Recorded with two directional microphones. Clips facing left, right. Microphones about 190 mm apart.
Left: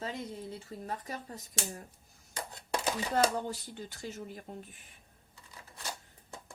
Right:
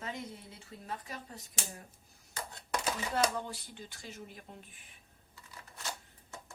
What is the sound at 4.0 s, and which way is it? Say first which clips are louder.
Speech: left 6 dB; 45° left (ahead or behind).